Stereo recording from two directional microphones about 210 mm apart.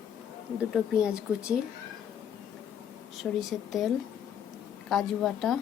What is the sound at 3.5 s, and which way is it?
Speech, centre (ahead or behind).